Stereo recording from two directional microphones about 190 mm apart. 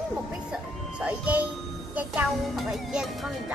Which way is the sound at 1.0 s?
10° right (ahead or behind).